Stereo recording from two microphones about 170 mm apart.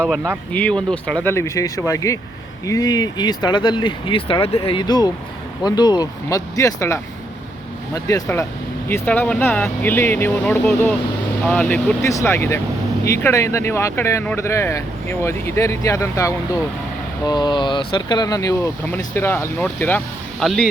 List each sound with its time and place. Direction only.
0.5 s speech: 10° left (ahead or behind)